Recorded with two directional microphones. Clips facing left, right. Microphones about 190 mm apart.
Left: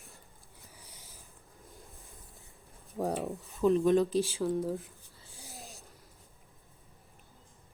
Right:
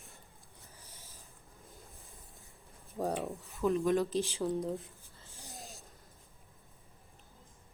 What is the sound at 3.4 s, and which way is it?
Speech, 15° left (ahead or behind).